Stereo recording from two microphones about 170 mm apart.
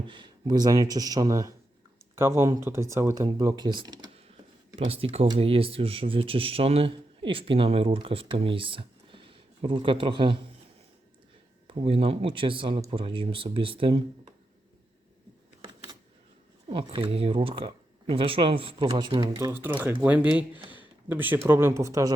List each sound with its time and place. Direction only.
0.1 s speech: 25° right (ahead or behind)
11.7 s speech: 35° right (ahead or behind)
16.6 s speech: 35° right (ahead or behind); by 22.1 s 20° right (ahead or behind)